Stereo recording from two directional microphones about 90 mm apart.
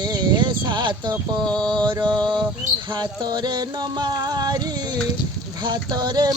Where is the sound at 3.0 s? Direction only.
50° right (ahead or behind).